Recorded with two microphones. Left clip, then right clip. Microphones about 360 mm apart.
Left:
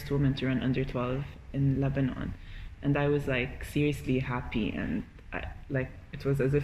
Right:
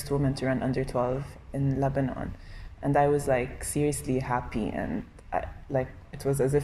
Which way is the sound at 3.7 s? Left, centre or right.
Right.